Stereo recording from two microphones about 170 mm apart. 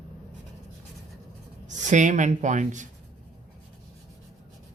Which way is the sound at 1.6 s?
45° right (ahead or behind).